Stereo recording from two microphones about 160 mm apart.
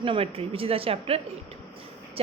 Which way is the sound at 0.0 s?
35° right (ahead or behind).